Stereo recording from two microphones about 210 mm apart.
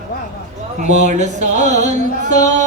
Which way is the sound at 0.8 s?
35° right (ahead or behind).